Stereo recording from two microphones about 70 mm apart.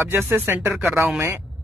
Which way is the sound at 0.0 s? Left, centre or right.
Right.